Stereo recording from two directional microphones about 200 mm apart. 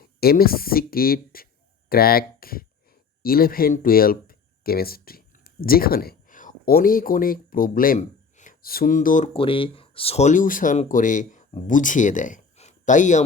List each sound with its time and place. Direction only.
0.0 s speech: 50° left (ahead or behind)